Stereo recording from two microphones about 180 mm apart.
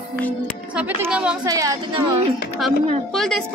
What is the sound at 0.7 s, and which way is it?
Speech, 5° right (ahead or behind).